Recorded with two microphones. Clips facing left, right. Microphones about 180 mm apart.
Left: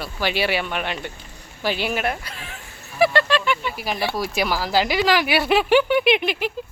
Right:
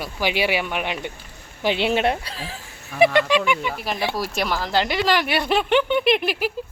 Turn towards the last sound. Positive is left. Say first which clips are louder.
# even
turn(degrees=-5)  # may be behind; listen again after turning